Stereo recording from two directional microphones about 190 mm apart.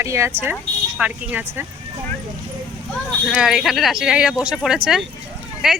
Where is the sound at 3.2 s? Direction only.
Centre (ahead or behind).